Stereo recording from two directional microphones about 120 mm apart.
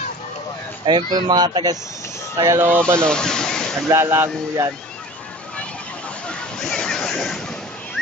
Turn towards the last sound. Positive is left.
turn(degrees=5)  # may be behind; listen again after turning